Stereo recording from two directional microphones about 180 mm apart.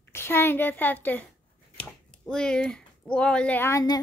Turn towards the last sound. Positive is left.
turn(degrees=20)  # may be behind; listen again after turning